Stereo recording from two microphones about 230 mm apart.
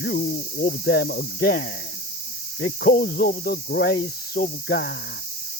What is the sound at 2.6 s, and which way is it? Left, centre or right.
Speech, left.